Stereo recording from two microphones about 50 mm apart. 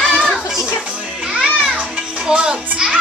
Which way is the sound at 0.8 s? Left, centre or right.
Right.